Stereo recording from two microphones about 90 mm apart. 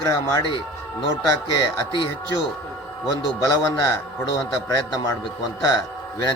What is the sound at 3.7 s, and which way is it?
Speech, 40° left (ahead or behind).